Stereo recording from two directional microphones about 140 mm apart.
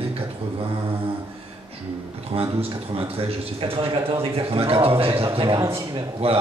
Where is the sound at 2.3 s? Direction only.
40° right (ahead or behind).